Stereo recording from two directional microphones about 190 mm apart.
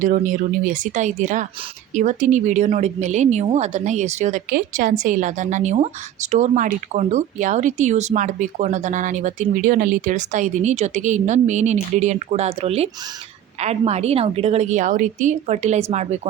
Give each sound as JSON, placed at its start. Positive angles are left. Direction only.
{"t": 0.0, "sound": "speech", "side_deg": -45}